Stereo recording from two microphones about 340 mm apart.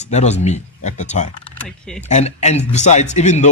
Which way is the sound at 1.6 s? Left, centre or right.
Centre.